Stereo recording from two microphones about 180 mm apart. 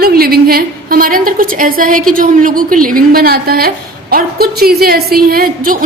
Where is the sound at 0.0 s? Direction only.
55° right (ahead or behind).